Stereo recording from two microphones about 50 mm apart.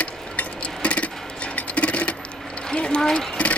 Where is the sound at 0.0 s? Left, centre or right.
Left.